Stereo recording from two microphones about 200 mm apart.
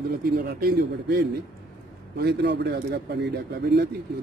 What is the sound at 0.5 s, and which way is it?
A man's voice, 50° right (ahead or behind).